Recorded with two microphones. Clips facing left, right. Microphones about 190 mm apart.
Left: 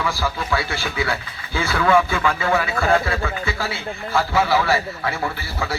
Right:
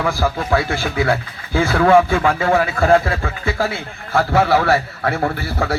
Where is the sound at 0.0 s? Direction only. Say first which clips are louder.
Right 5 dB; 50° right (ahead or behind).